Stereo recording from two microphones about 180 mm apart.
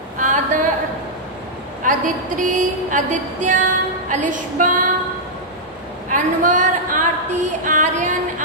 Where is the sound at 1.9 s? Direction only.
45° right (ahead or behind).